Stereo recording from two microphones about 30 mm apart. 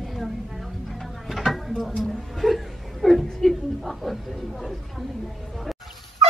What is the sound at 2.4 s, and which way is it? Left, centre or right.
Chuckle, centre.